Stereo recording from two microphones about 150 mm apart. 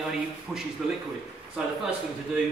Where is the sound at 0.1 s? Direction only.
5° right (ahead or behind).